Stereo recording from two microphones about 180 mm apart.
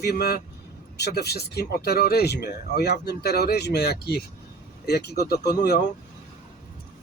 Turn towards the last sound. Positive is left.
turn(degrees=60)  # may be behind; listen again after turning